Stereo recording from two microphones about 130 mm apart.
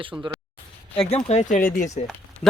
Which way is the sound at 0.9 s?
55° left (ahead or behind).